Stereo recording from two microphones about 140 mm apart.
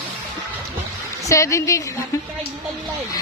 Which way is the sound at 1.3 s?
20° left (ahead or behind).